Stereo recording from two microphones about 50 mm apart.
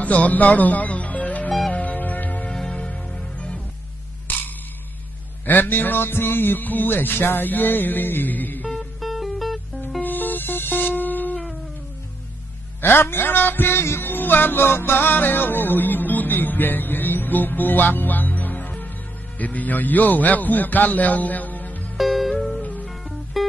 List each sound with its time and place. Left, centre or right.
0.0 s music: left
2.4 s music: centre
4.3 s a sound: left
5.4 s music: left
8.7 s music: centre
10.0 s music: left
12.8 s music: left
21.9 s music: centre
22.6 s music: left
22.8 s music: centre